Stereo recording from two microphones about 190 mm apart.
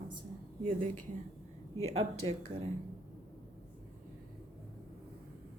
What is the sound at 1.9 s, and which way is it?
Speech, 35° right (ahead or behind).